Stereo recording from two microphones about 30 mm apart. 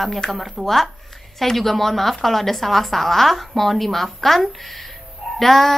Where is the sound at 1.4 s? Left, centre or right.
Centre.